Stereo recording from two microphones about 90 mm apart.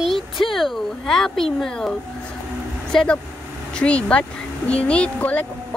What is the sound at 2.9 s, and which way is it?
Speech, 10° left (ahead or behind).